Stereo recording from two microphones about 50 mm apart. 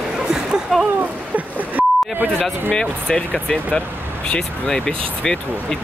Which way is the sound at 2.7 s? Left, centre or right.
Centre.